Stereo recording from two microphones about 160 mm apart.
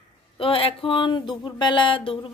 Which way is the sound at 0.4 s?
35° left (ahead or behind).